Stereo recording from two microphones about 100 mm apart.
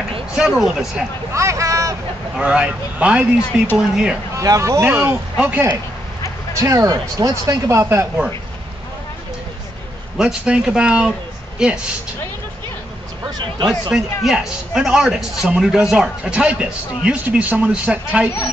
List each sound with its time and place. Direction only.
0.3 s a man's voice: 10° right (ahead or behind)
1.3 s a sound: 30° right (ahead or behind)
2.3 s a man's voice: 10° right (ahead or behind)
4.4 s a man's voice: 30° right (ahead or behind); by 5.8 s 15° right (ahead or behind)
6.6 s a man's voice: 35° right (ahead or behind)
10.1 s speech: 10° right (ahead or behind)
13.7 s a man's voice: 5° right (ahead or behind)